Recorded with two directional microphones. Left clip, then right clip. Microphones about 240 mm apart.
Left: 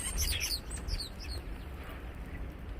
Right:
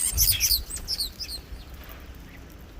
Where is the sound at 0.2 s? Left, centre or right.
Right.